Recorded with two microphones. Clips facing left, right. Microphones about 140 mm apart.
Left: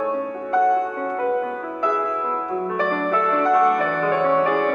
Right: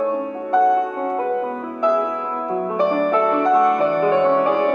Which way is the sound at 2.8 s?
25° right (ahead or behind).